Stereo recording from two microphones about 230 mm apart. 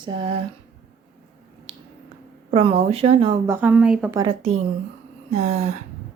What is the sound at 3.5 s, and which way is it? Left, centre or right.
Speech, centre.